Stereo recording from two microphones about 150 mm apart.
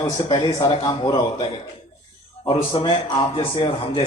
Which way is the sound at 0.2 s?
30° left (ahead or behind).